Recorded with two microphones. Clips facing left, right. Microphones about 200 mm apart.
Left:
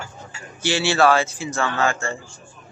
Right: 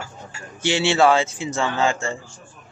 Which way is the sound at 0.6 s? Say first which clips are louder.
Right 1 dB; 20° right (ahead or behind).